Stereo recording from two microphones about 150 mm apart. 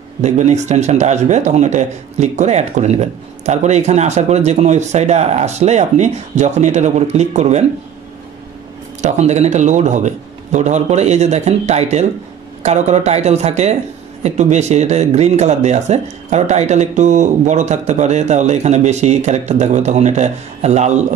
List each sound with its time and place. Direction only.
0.2 s speech: 50° right (ahead or behind)
9.0 s speech: 50° right (ahead or behind)